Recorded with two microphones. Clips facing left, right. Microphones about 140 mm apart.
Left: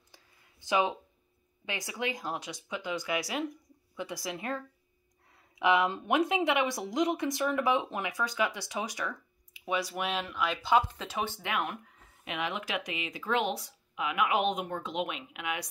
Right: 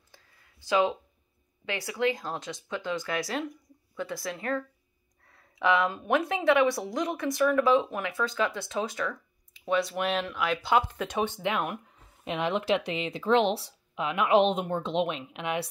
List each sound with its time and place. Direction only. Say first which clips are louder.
0.1 s a sound: right 2 dB; 15° left (ahead or behind)
1.7 s speech: right 7 dB; 15° left (ahead or behind); by 11.1 s centre (ahead or behind)
11.2 s speech: right 4 dB; 20° right (ahead or behind)
12.3 s speech: right 8 dB; 30° right (ahead or behind)